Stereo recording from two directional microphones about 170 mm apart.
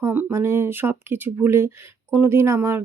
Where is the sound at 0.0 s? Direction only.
10° right (ahead or behind).